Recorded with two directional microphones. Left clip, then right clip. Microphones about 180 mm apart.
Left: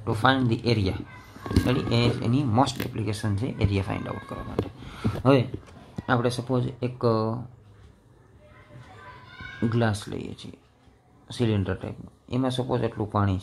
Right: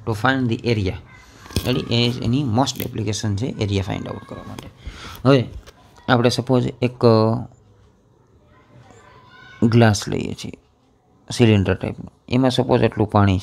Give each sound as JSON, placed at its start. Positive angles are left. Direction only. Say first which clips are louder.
{"t": 0.0, "sound": "speech", "louder": "right 2 dB", "side_deg": -25}
{"t": 9.7, "sound": "speech", "louder": "right 10 dB", "side_deg": -45}